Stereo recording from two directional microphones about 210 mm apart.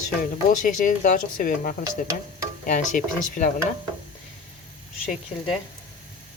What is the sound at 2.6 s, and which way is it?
Speech, 40° left (ahead or behind).